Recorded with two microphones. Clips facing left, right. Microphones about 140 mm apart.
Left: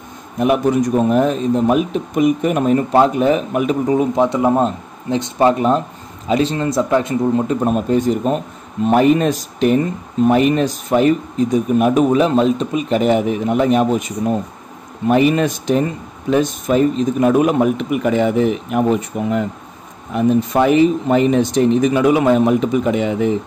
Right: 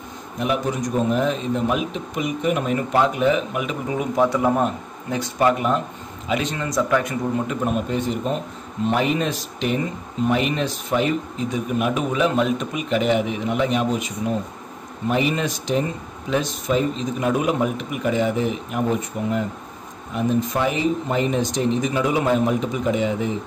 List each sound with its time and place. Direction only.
0.4 s speech: 60° left (ahead or behind); by 4.1 s 35° left (ahead or behind)
4.1 s speech: 20° left (ahead or behind); by 14.0 s 45° left (ahead or behind)
15.0 s speech: 55° left (ahead or behind)
20.5 s speech: 60° left (ahead or behind)